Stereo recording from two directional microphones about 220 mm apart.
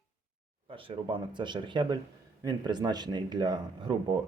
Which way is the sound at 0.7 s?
25° right (ahead or behind).